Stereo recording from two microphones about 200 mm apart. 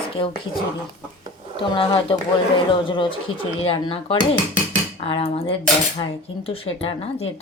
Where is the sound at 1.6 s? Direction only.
25° left (ahead or behind).